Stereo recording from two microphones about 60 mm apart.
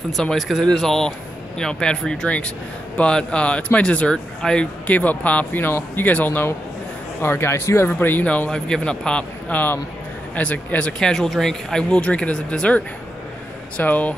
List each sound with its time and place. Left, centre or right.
0.1 s speech: centre; by 6.5 s left
7.2 s speech: left
7.9 s speech: left
8.5 s speech: centre
9.5 s speech: left
11.0 s speech: centre; by 14.1 s left